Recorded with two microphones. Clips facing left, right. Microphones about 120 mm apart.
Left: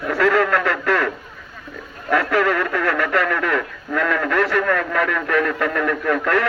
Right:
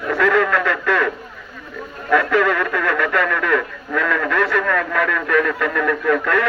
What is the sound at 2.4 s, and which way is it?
Speech, 45° left (ahead or behind).